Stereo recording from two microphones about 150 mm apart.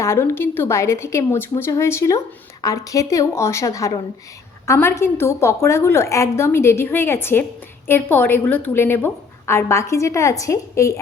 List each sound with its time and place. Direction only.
0.0 s a woman's voice: 15° left (ahead or behind)